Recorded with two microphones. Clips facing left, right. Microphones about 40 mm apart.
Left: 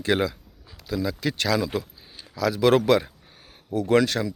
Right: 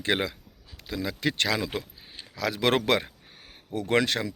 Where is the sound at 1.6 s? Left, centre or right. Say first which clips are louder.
Left 4 dB; right.